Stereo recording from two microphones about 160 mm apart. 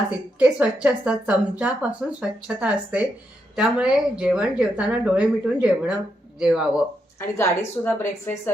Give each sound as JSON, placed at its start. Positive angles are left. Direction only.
{"t": 0.3, "sound": "speech", "side_deg": -5}
{"t": 7.2, "sound": "a woman's voice", "side_deg": 15}